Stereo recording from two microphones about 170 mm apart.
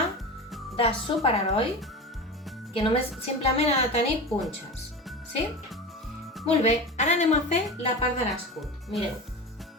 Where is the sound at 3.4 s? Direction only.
35° left (ahead or behind).